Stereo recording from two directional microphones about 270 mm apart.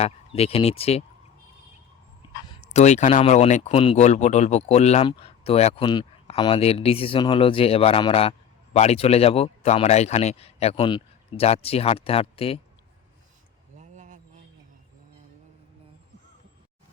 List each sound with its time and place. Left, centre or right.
0.0 s speech: left
2.7 s speech: left
13.7 s a sound: right